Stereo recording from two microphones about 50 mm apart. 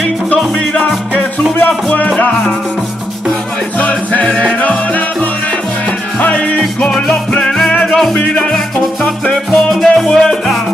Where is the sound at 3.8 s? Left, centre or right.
Left.